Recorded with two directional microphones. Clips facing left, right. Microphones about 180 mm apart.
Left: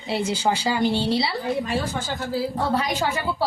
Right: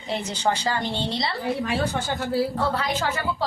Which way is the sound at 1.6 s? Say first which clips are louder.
Right 1 dB; 65° right (ahead or behind).